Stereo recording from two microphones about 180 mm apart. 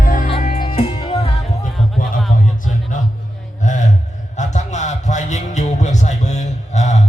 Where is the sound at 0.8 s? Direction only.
35° left (ahead or behind).